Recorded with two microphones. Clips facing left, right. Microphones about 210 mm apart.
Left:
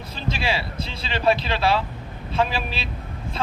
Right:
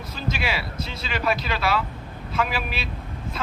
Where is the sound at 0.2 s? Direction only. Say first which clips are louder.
Left 2 dB; 30° left (ahead or behind).